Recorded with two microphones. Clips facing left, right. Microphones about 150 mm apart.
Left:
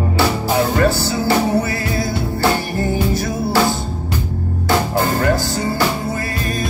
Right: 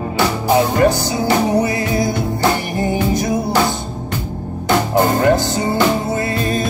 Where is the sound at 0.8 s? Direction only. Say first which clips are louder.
Right 2 dB; 20° right (ahead or behind).